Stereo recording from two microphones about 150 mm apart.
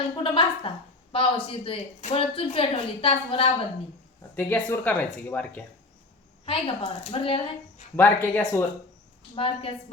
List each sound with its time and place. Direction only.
0.2 s a woman's voice: 35° left (ahead or behind)
4.4 s speech: 10° left (ahead or behind)
6.4 s a woman's voice: 40° left (ahead or behind)
7.9 s speech: 15° left (ahead or behind)
9.3 s a woman's voice: 40° left (ahead or behind)